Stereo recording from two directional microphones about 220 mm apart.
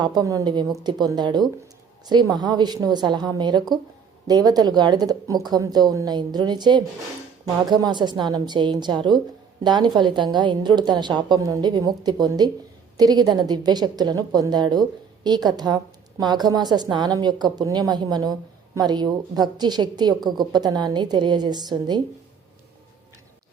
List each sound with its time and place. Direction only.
0.0 s a woman's voice: 20° right (ahead or behind)